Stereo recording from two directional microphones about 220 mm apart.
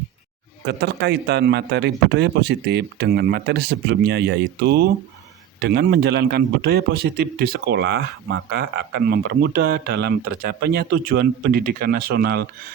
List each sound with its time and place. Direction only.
0.6 s a man's voice: 50° right (ahead or behind)